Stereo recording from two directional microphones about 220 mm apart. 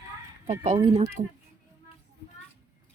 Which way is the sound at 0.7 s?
20° right (ahead or behind).